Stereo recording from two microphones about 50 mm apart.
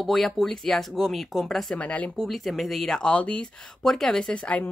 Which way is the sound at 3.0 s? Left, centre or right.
Left.